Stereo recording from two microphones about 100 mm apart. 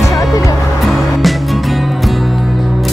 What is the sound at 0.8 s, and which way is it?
Music, centre (ahead or behind).